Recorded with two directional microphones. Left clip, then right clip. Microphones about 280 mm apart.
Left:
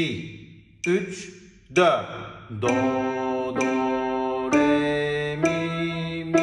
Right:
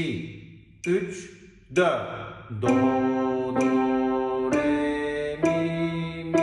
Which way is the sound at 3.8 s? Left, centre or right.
Left.